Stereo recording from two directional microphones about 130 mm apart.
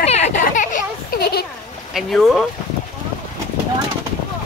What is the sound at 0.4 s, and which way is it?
Children playing, 90° left.